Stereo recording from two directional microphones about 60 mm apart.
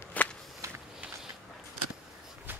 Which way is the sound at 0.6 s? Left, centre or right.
Right.